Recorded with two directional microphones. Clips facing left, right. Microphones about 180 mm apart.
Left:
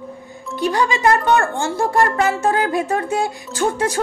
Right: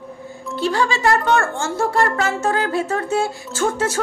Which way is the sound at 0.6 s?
15° left (ahead or behind).